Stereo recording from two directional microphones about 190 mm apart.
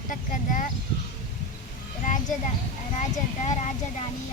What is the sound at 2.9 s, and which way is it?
Speech, 35° left (ahead or behind).